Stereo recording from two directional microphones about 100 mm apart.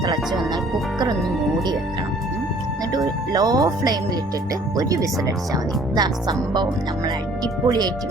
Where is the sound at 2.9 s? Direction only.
40° right (ahead or behind).